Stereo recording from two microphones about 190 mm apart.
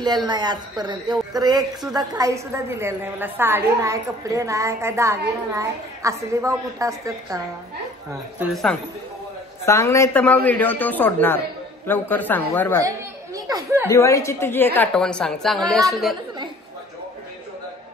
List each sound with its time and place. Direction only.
0.0 s a woman's voice: 20° right (ahead or behind)
9.7 s speech: 15° left (ahead or behind)
12.8 s speech: 15° right (ahead or behind)
13.8 s a woman's voice: 15° left (ahead or behind); by 16.2 s centre (ahead or behind)